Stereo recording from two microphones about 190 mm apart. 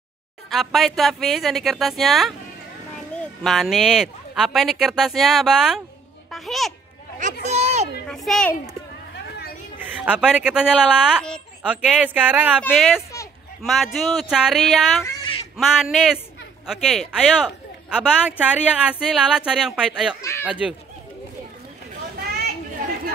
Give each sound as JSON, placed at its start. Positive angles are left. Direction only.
{"t": 0.5, "sound": "a man's voice", "side_deg": 0}
{"t": 6.3, "sound": "a sound", "side_deg": 0}
{"t": 7.4, "sound": "a sound", "side_deg": -35}
{"t": 8.1, "sound": "a child's voice", "side_deg": 0}
{"t": 9.8, "sound": "a woman's voice", "side_deg": -5}
{"t": 20.2, "sound": "speech", "side_deg": 15}
{"t": 20.4, "sound": "speech", "side_deg": -5}